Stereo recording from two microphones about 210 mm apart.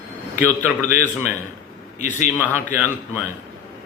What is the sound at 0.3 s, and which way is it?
Speech, 10° right (ahead or behind).